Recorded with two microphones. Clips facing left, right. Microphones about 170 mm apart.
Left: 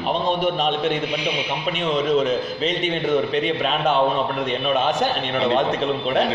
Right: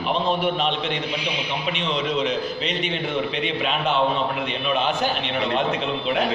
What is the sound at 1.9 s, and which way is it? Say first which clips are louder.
Speech: left 5 dB; 45° left (ahead or behind).